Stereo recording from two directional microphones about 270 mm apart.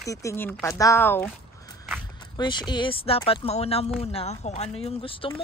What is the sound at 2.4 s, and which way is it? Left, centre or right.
Speech, centre.